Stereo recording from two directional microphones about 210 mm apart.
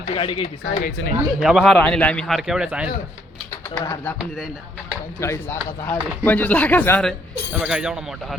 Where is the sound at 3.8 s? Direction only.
15° left (ahead or behind).